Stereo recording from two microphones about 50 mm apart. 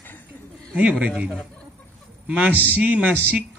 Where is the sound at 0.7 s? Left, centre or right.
Right.